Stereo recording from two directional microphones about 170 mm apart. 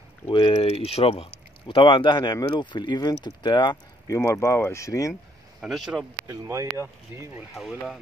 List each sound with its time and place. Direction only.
0.3 s speech: 30° left (ahead or behind)
5.6 s speech: centre (ahead or behind)
6.2 s speech: 15° right (ahead or behind)
7.5 s speech: centre (ahead or behind)